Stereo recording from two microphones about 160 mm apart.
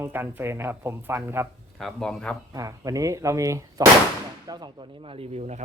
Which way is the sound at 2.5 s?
20° right (ahead or behind).